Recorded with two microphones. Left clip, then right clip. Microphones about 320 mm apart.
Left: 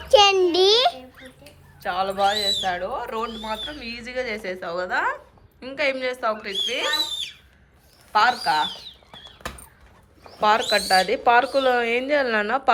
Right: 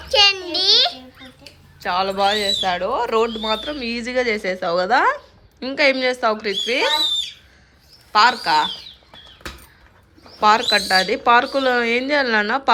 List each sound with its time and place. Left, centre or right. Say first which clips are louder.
0.1 s a sound: even; centre
1.8 s speech: right 3 dB; centre
8.1 s speech: right 4 dB; centre
10.4 s speech: right 4 dB; centre